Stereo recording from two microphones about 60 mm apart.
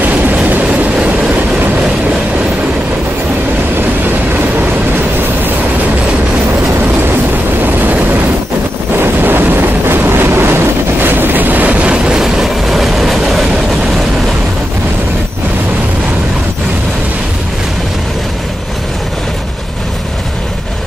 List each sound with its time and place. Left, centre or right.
0.0 s train: right
7.6 s vehicle: right
11.9 s train: centre